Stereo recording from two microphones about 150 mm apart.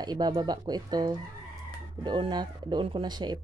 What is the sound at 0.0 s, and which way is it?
Speech, 30° right (ahead or behind).